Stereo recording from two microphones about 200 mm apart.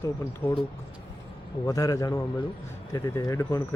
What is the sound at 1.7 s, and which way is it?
Speech, 15° left (ahead or behind).